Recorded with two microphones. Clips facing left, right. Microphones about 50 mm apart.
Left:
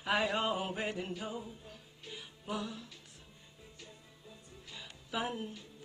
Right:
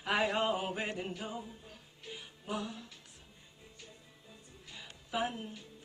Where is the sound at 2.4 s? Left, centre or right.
Centre.